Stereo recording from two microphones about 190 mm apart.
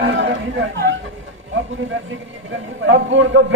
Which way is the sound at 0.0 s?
70° right (ahead or behind).